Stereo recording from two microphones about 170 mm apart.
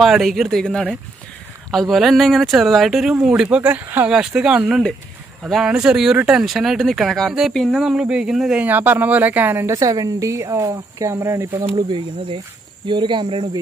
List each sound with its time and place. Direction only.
0.0 s speech: centre (ahead or behind); by 11.4 s 15° right (ahead or behind)
11.5 s speech: 30° right (ahead or behind)